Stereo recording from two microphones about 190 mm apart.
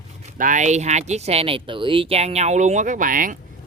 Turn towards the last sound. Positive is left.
turn(degrees=-45)  # may be behind; listen again after turning